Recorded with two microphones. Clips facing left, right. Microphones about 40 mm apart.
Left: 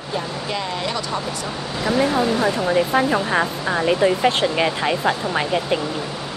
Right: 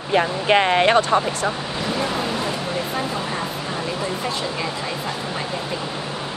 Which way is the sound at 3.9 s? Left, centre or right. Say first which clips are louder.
Left 11 dB; left.